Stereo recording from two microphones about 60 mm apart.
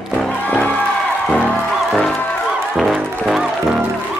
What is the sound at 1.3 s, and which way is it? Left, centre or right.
Music, centre.